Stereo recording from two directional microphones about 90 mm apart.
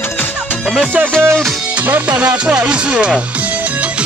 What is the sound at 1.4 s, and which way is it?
Speech, 15° right (ahead or behind).